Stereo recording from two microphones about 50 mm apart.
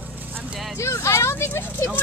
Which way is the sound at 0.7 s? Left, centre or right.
Left.